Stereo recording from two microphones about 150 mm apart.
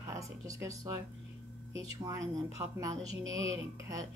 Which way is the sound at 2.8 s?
25° right (ahead or behind).